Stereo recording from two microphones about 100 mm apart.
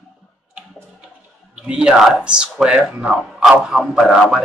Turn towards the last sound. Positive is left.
turn(degrees=-5)  # may be behind; listen again after turning